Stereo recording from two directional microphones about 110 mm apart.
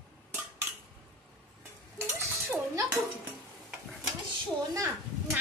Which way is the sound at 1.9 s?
20° right (ahead or behind).